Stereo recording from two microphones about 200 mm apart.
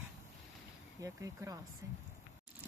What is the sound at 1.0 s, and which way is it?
Speech, 15° right (ahead or behind).